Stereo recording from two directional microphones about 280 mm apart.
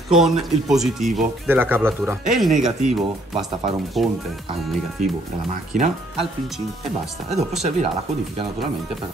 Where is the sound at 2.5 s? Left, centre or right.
Right.